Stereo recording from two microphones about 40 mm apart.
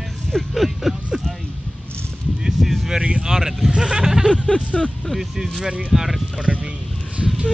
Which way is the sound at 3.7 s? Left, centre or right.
Right.